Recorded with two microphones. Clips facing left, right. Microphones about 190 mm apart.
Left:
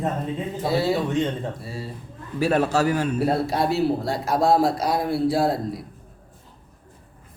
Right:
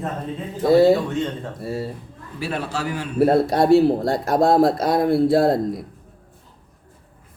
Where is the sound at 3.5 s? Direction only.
50° right (ahead or behind).